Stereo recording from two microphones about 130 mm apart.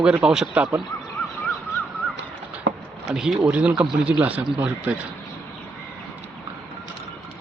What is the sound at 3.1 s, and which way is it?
A man's voice, 5° right (ahead or behind).